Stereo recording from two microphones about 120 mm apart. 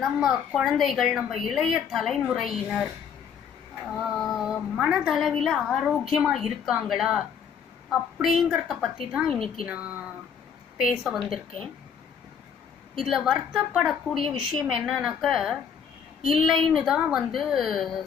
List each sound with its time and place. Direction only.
0.5 s a woman's voice: centre (ahead or behind)
9.7 s a woman's voice: 10° right (ahead or behind)
12.9 s a woman's voice: centre (ahead or behind)